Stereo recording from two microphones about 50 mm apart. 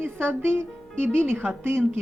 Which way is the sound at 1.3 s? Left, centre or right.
Right.